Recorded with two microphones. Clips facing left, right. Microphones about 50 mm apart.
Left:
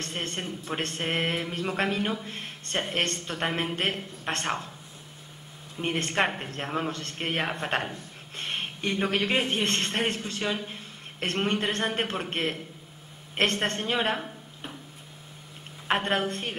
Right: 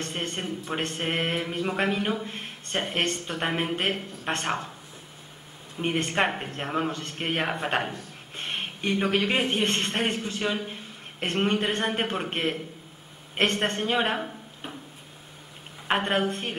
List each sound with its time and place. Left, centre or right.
0.0 s speech: centre
1.5 s speech: centre
1.8 s speech: centre
5.8 s a woman's voice: centre
15.9 s speech: centre